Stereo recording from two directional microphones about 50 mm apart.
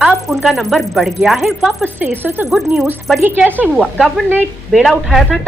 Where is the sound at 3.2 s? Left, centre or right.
Right.